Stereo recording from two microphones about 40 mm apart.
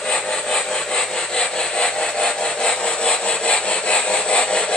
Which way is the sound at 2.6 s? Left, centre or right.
Left.